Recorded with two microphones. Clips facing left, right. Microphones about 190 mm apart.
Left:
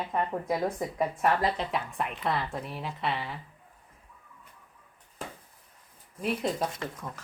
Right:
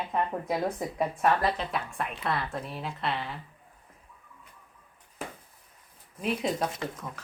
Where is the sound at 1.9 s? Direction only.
15° left (ahead or behind).